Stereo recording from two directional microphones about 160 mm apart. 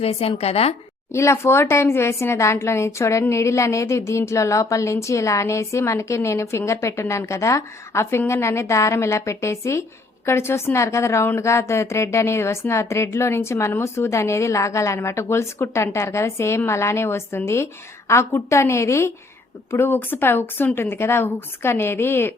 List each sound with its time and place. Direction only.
0.0 s a woman's voice: 40° left (ahead or behind)
1.1 s a woman's voice: 15° left (ahead or behind)